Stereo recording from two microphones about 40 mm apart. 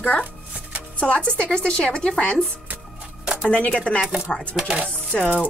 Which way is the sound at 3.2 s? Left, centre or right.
Centre.